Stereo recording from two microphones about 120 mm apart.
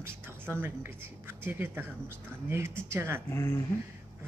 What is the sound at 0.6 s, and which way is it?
Speech, 20° right (ahead or behind).